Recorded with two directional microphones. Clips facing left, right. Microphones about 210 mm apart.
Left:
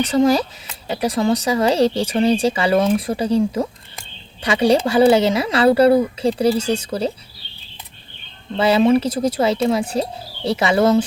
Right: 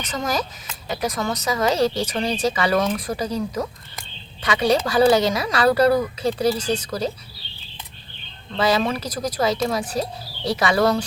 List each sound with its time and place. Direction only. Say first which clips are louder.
0.0 s speech: left 10 dB; 30° left (ahead or behind)
8.5 s speech: left 7 dB; 30° left (ahead or behind)